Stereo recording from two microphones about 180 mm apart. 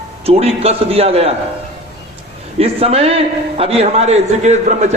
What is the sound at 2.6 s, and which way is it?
A man's voice, 35° right (ahead or behind).